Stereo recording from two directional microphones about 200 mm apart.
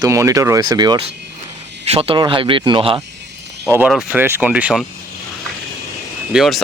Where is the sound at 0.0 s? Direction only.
15° right (ahead or behind).